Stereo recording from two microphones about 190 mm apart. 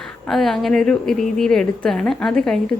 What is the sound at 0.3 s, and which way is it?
Speech, centre (ahead or behind).